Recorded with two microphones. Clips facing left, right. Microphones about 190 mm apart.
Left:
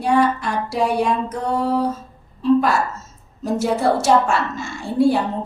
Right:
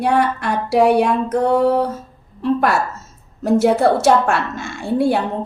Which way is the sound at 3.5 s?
60° right (ahead or behind).